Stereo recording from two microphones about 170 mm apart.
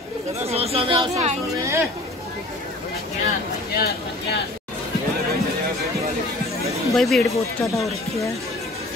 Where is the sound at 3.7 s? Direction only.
70° left (ahead or behind).